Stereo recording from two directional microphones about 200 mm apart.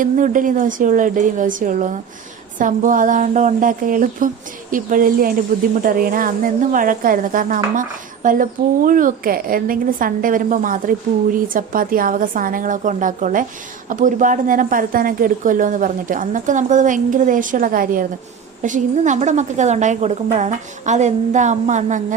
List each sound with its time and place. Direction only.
0.0 s a woman's voice: 40° right (ahead or behind)